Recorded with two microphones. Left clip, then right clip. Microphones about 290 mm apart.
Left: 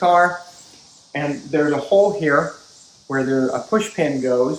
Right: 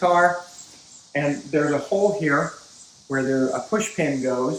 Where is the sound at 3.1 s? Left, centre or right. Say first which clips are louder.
Left 3 dB; centre.